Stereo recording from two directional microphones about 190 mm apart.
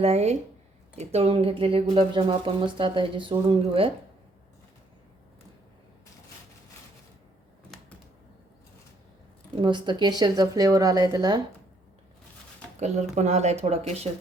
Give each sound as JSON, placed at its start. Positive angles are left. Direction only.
{"t": 0.0, "sound": "speech", "side_deg": -35}
{"t": 9.6, "sound": "speech", "side_deg": -25}
{"t": 13.1, "sound": "speech", "side_deg": -35}